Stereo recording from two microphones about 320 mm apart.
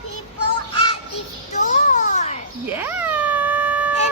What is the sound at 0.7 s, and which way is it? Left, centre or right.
Music, centre.